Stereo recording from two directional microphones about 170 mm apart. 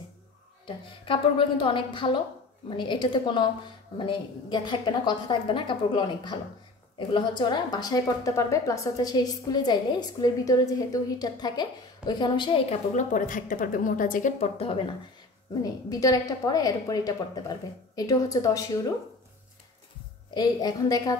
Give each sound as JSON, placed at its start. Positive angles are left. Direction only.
{"t": 0.7, "sound": "a woman's voice", "side_deg": 30}
{"t": 12.9, "sound": "speech", "side_deg": 50}
{"t": 15.6, "sound": "a woman's voice", "side_deg": 20}
{"t": 20.3, "sound": "a woman's voice", "side_deg": 25}